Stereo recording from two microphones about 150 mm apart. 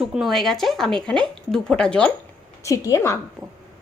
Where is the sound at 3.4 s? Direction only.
Centre (ahead or behind).